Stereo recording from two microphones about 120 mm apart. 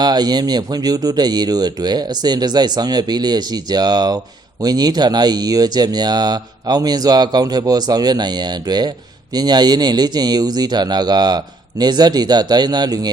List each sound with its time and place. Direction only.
0.0 s speech: 35° right (ahead or behind)